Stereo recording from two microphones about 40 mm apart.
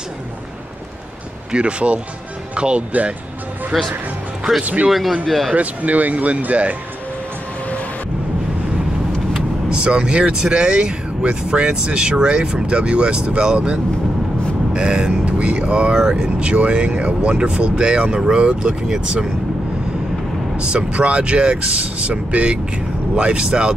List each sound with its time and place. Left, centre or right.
1.5 s speech: right
3.7 s speech: centre
5.2 s speech: centre
5.5 s speech: right
9.7 s speech: right
20.5 s speech: right